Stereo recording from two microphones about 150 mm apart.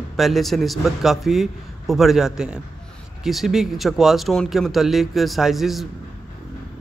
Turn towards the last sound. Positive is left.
turn(degrees=0)  # may be behind; listen again after turning